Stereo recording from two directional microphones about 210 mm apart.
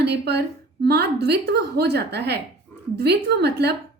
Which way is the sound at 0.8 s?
50° right (ahead or behind).